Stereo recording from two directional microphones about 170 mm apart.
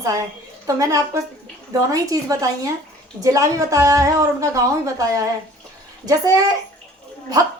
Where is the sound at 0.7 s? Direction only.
20° right (ahead or behind).